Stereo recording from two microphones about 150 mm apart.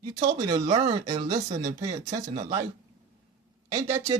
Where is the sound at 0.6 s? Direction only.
50° right (ahead or behind).